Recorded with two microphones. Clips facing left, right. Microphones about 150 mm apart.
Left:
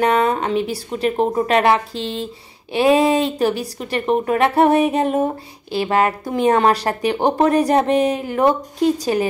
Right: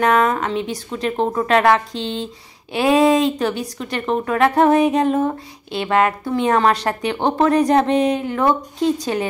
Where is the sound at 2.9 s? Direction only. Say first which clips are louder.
Right 2 dB; 30° left (ahead or behind).